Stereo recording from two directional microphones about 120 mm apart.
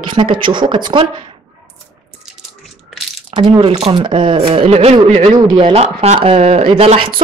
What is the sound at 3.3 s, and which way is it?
Speech, 40° right (ahead or behind).